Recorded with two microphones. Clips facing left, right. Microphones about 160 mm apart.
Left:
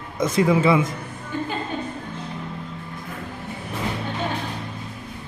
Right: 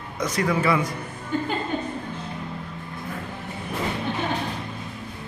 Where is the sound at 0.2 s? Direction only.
25° left (ahead or behind).